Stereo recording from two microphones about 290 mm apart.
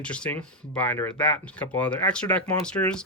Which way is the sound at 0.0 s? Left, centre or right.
Centre.